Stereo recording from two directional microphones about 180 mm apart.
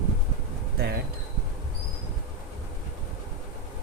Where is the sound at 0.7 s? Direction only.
60° right (ahead or behind).